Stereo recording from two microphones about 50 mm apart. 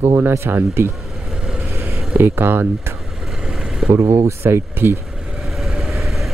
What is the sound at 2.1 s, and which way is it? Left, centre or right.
Speech, right.